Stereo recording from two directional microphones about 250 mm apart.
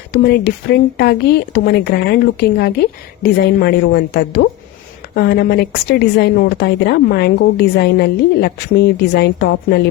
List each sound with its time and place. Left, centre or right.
0.1 s a woman's voice: left